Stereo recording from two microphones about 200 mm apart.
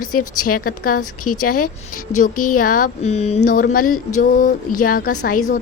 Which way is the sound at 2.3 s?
90° left.